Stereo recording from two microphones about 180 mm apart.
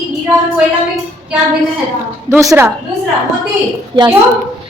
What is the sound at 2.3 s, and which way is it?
Speech, 15° right (ahead or behind).